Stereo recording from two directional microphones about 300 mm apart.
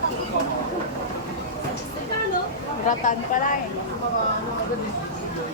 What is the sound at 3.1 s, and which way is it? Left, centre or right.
Speech, left.